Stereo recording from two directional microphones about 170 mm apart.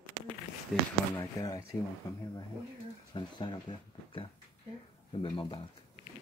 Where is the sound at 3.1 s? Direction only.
25° left (ahead or behind).